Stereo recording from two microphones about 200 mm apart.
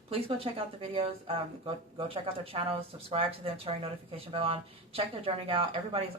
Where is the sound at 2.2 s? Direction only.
30° right (ahead or behind).